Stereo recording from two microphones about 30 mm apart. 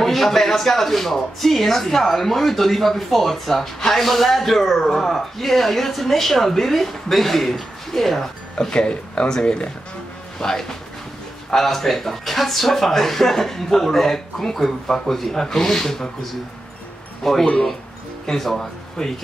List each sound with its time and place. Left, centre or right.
0.0 s speech: centre
8.5 s speech: left
10.4 s speech: centre
17.2 s speech: centre